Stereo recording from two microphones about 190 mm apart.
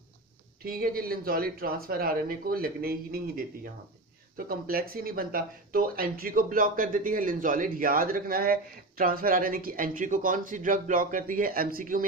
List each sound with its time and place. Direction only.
0.7 s speech: 50° right (ahead or behind)